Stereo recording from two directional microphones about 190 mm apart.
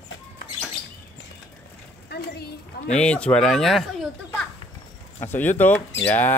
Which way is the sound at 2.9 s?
5° left (ahead or behind).